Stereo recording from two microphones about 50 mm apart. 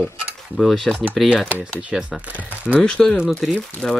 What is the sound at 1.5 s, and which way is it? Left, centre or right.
Speech, right.